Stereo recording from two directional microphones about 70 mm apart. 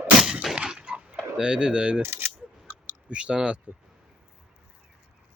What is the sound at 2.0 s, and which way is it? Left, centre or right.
Speech, right.